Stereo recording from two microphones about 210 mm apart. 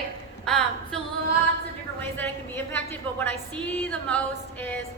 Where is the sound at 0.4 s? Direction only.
Centre (ahead or behind).